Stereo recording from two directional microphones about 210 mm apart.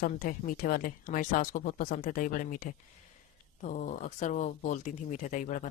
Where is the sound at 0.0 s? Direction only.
40° left (ahead or behind).